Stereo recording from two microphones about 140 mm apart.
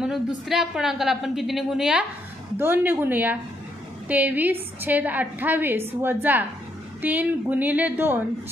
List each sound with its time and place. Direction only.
0.0 s a woman's voice: centre (ahead or behind)
2.5 s a woman's voice: 15° right (ahead or behind)